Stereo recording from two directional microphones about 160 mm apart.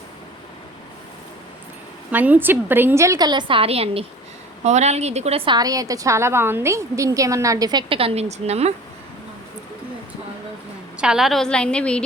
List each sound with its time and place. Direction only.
2.0 s a woman's voice: 10° right (ahead or behind); by 5.4 s 40° right (ahead or behind)
5.5 s a woman's voice: 25° right (ahead or behind); by 8.7 s 40° right (ahead or behind)
10.9 s a woman's voice: 5° right (ahead or behind)